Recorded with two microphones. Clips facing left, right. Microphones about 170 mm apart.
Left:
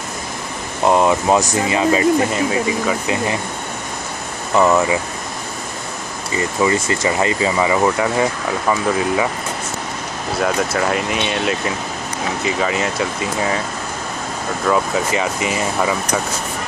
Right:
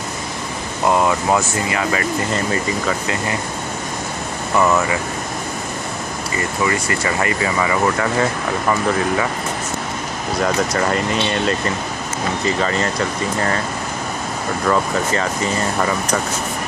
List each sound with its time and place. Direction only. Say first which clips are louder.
0.8 s speech: left 2 dB; 20° left (ahead or behind)
2.3 s speech: left 2 dB; 5° left (ahead or behind)
4.6 s speech: left 2 dB; 20° left (ahead or behind)
6.3 s speech: left 4 dB; 25° left (ahead or behind)
10.4 s speech: even; 5° left (ahead or behind)
14.7 s speech: left 1 dB; 10° left (ahead or behind)